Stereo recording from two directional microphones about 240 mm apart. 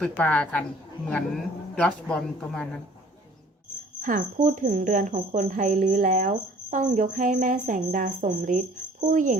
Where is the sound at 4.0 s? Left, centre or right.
Right.